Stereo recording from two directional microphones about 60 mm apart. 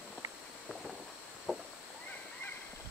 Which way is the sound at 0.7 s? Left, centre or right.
Centre.